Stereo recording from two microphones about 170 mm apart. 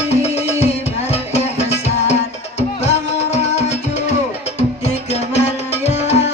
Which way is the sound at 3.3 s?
40° left (ahead or behind).